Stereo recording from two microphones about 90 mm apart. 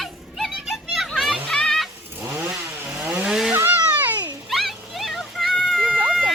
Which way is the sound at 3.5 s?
20° right (ahead or behind).